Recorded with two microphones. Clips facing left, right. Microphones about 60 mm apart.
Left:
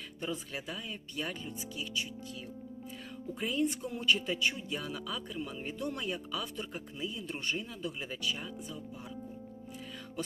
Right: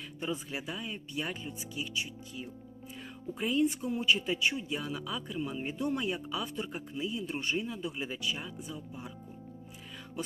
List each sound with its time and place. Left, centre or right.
0.2 s speech: centre
3.3 s speech: centre